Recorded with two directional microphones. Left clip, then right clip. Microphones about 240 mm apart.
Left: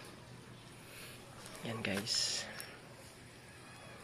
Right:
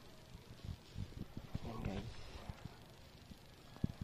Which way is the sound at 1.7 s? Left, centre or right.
Centre.